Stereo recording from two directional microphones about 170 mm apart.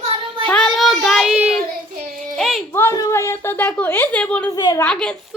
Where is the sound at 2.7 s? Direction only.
15° left (ahead or behind).